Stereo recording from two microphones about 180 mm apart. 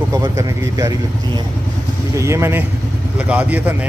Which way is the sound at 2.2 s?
15° right (ahead or behind).